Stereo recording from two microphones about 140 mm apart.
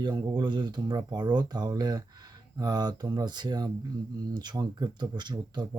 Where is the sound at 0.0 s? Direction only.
30° right (ahead or behind).